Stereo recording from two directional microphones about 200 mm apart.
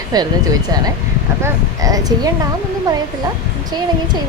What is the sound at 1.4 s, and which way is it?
Speech, 15° right (ahead or behind).